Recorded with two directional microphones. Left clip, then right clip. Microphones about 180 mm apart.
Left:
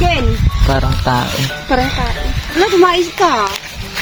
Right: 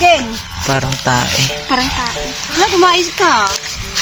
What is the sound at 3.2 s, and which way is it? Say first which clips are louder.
Speech: right 2 dB; 20° right (ahead or behind).